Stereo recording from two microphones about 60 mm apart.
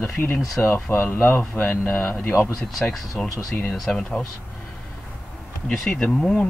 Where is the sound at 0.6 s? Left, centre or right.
Left.